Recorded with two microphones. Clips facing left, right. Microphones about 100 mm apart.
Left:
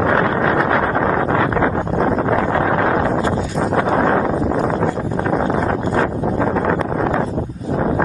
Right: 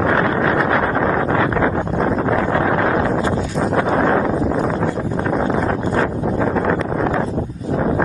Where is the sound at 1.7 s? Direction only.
50° left (ahead or behind).